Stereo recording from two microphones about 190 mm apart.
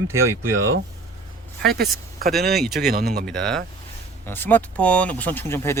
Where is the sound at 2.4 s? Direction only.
55° right (ahead or behind).